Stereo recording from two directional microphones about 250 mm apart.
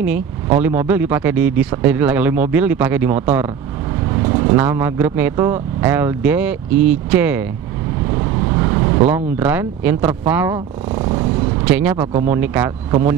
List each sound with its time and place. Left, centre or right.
0.0 s speech: centre
8.5 s speech: centre